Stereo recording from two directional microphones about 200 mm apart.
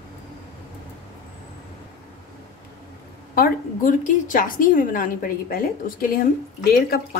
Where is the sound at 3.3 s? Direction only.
45° left (ahead or behind).